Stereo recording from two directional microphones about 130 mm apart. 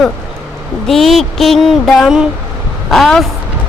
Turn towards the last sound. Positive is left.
turn(degrees=0)  # may be behind; listen again after turning